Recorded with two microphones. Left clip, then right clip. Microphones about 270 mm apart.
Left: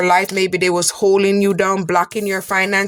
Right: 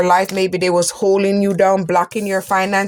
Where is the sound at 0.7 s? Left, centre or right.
Left.